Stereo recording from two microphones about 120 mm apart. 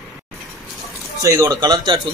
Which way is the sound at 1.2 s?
25° right (ahead or behind).